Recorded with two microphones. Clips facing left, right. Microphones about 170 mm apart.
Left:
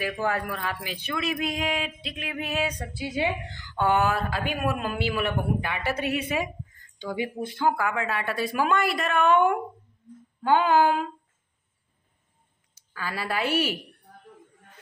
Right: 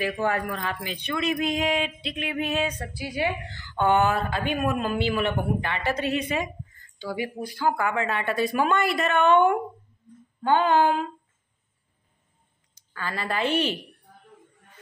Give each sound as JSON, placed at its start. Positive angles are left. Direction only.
{"t": 0.2, "sound": "speech", "side_deg": 0}
{"t": 2.8, "sound": "a woman's voice", "side_deg": 20}
{"t": 3.7, "sound": "a woman's voice", "side_deg": 5}
{"t": 7.0, "sound": "speech", "side_deg": 20}
{"t": 7.7, "sound": "speech", "side_deg": 0}
{"t": 12.9, "sound": "a woman's voice", "side_deg": 10}